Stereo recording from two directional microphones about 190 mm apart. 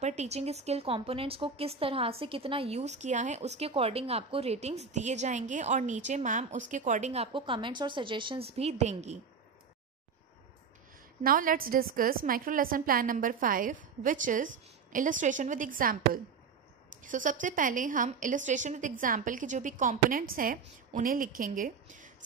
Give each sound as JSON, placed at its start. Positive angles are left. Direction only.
{"t": 0.0, "sound": "speech", "side_deg": -35}
{"t": 11.2, "sound": "a woman's voice", "side_deg": -45}